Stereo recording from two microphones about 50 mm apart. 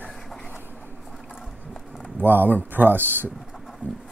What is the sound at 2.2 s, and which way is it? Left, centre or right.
Speech, right.